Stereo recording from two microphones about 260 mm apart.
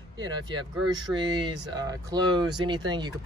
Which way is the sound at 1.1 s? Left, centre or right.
Centre.